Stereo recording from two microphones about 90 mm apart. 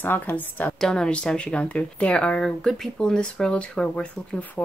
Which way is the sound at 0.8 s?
10° left (ahead or behind).